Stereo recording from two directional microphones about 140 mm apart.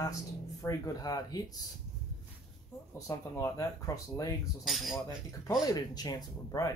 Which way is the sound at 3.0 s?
20° left (ahead or behind).